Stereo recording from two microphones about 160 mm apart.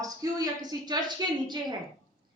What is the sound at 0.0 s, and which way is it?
A man's voice, 25° right (ahead or behind).